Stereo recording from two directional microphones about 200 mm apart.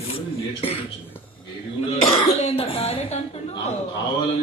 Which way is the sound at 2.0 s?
30° left (ahead or behind).